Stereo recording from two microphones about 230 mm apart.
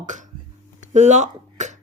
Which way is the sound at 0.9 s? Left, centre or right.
Right.